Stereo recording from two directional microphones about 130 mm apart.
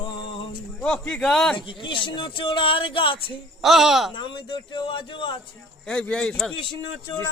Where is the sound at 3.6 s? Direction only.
Centre (ahead or behind).